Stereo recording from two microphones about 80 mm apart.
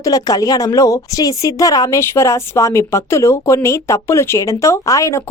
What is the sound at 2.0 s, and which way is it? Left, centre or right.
Speech, left.